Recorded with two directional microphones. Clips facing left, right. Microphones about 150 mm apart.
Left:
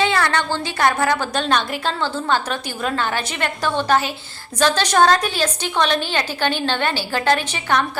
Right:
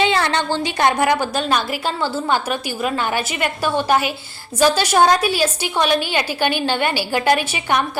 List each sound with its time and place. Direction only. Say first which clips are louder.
0.0 s a woman's voice: right 1 dB; 20° right (ahead or behind)
1.3 s a woman's voice: even; 5° right (ahead or behind)